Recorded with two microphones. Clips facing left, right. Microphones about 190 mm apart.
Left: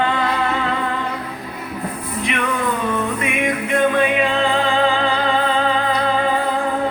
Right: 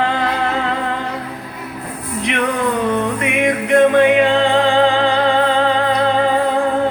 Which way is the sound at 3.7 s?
75° right (ahead or behind).